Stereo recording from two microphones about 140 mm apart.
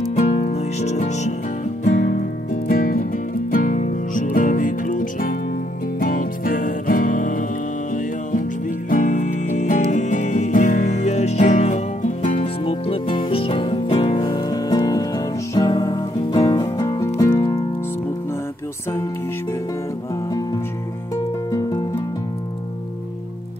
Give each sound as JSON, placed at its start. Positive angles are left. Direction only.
{"t": 0.3, "sound": "music", "side_deg": 50}
{"t": 1.9, "sound": "music", "side_deg": 65}
{"t": 2.7, "sound": "music", "side_deg": 80}
{"t": 3.5, "sound": "music", "side_deg": 70}
{"t": 5.9, "sound": "music", "side_deg": 90}
{"t": 21.5, "sound": "music", "side_deg": 25}